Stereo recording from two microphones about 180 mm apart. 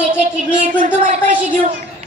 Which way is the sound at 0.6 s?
45° right (ahead or behind).